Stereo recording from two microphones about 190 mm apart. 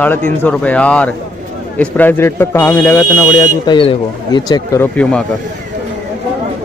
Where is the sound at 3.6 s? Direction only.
25° left (ahead or behind).